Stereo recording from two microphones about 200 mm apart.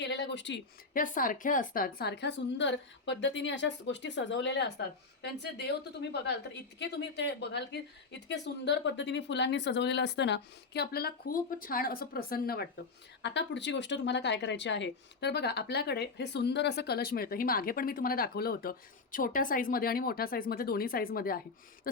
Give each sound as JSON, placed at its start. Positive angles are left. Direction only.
{"t": 0.0, "sound": "speech", "side_deg": 60}
{"t": 0.9, "sound": "a woman's voice", "side_deg": 45}
{"t": 13.2, "sound": "speech", "side_deg": 60}